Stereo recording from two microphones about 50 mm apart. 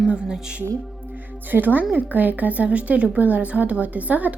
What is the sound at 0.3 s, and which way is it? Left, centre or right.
Speech, centre.